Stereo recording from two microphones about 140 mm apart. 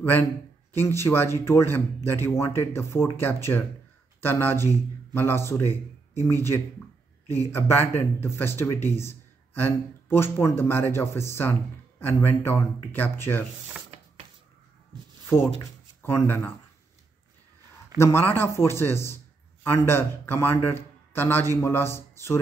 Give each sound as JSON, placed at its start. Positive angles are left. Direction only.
{"t": 0.7, "sound": "a man's voice", "side_deg": 15}
{"t": 16.0, "sound": "a man's voice", "side_deg": 15}
{"t": 17.9, "sound": "a man's voice", "side_deg": 20}